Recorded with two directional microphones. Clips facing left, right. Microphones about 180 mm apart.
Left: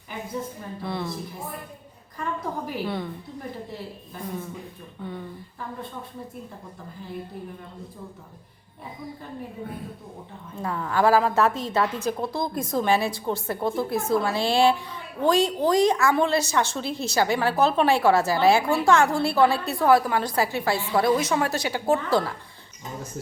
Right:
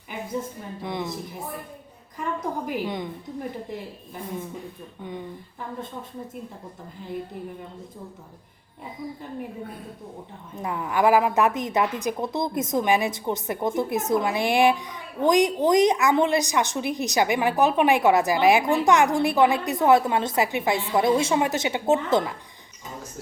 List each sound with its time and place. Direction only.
0.8 s a woman's voice: 15° right (ahead or behind)
5.0 s a woman's voice: 15° right (ahead or behind)
10.5 s a woman's voice: 15° right (ahead or behind)